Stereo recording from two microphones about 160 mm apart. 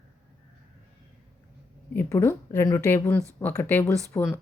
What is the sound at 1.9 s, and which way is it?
A woman's voice, 15° left (ahead or behind).